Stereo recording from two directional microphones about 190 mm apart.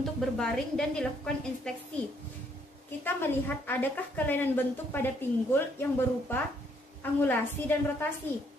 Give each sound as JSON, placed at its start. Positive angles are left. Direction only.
{"t": 0.0, "sound": "a woman's voice", "side_deg": 0}
{"t": 3.0, "sound": "a woman's voice", "side_deg": 10}